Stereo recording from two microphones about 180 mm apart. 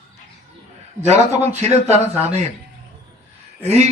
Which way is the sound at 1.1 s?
40° right (ahead or behind).